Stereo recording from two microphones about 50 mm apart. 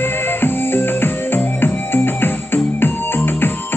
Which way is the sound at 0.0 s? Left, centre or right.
Left.